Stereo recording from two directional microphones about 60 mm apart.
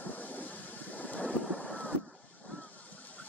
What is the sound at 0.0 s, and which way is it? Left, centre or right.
Vehicle, left.